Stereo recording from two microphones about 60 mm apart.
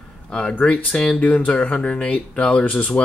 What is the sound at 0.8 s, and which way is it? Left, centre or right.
Speech, centre.